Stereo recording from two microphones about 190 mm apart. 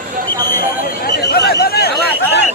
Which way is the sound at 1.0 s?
55° left (ahead or behind).